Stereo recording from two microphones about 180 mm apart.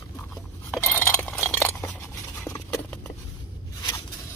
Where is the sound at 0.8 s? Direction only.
10° left (ahead or behind).